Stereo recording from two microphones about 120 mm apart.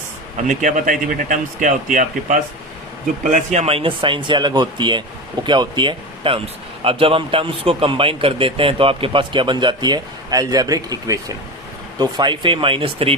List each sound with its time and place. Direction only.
0.4 s speech: 90° right; by 13.1 s 50° right (ahead or behind)